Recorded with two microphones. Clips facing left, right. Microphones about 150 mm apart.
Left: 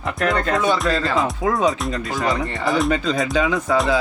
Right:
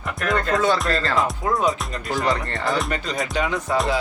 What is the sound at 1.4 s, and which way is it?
Speech, 90° left.